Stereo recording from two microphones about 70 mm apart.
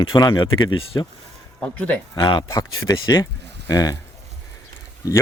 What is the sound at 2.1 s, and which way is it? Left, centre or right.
Speech, left.